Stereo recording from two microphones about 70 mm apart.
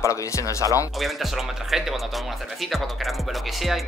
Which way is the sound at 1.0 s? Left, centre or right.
Centre.